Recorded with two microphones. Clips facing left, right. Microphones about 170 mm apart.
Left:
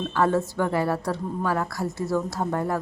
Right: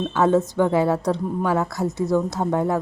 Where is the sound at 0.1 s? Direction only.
20° right (ahead or behind).